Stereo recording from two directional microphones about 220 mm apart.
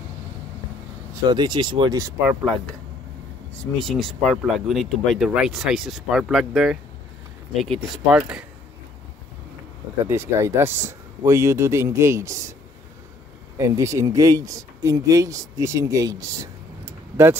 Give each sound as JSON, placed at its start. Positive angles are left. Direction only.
{"t": 1.2, "sound": "speech", "side_deg": -20}
{"t": 3.7, "sound": "speech", "side_deg": 0}
{"t": 10.0, "sound": "speech", "side_deg": -10}
{"t": 13.6, "sound": "speech", "side_deg": -15}